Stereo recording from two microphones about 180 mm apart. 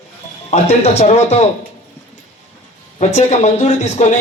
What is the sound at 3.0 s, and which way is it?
Speech, 40° left (ahead or behind).